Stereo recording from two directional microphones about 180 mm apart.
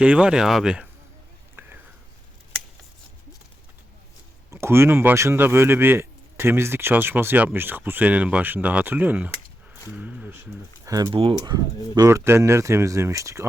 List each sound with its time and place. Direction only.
0.0 s speech: 5° right (ahead or behind)
1.6 s whispering: 10° right (ahead or behind)
4.5 s speech: 15° right (ahead or behind)
11.1 s speech: 30° right (ahead or behind)